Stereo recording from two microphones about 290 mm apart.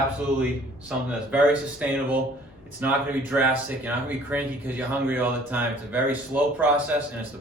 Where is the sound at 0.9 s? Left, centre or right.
Centre.